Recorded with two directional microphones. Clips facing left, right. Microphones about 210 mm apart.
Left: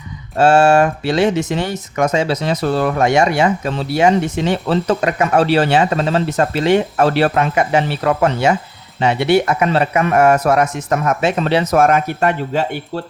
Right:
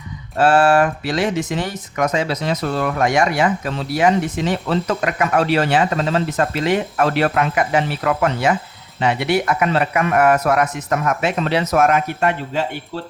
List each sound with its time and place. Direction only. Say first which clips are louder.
0.3 s speech: left 3 dB; 25° left (ahead or behind)